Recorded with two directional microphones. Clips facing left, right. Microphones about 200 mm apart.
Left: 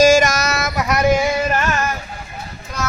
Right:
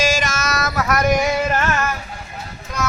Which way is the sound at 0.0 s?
45° left (ahead or behind).